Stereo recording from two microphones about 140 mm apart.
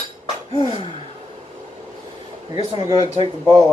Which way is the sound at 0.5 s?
40° left (ahead or behind).